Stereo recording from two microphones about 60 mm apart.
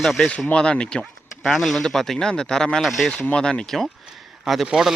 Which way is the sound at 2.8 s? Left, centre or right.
Centre.